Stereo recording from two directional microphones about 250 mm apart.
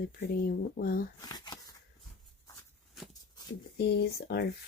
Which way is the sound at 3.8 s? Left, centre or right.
Left.